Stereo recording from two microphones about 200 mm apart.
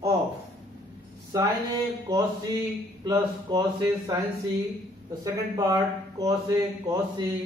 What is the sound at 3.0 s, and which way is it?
Speech, 20° right (ahead or behind).